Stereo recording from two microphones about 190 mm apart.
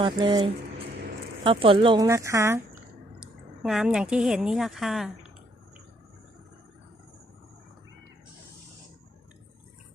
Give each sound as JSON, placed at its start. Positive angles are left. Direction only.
{"t": 0.0, "sound": "speech", "side_deg": -25}
{"t": 3.2, "sound": "speech", "side_deg": -5}